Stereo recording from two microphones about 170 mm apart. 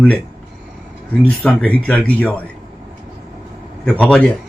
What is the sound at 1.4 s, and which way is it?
Speech, 5° left (ahead or behind).